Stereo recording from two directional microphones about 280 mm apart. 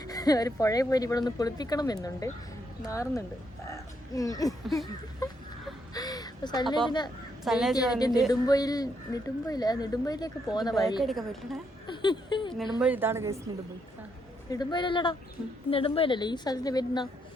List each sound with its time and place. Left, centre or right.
0.0 s speech: centre
5.9 s a sound: centre
7.4 s a woman's voice: centre
7.9 s speech: centre
11.0 s a woman's voice: centre
11.9 s a sound: centre
12.8 s a woman's voice: centre
14.5 s speech: centre